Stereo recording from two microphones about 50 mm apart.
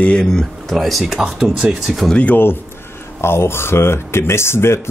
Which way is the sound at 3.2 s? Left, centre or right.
Left.